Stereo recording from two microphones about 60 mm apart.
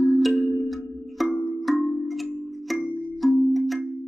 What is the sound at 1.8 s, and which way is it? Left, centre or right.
Tubular bells, centre.